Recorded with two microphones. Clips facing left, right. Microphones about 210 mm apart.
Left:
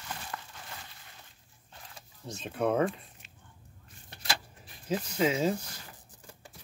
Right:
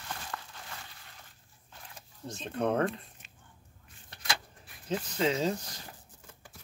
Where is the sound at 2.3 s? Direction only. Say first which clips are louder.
Left 1 dB; 5° left (ahead or behind).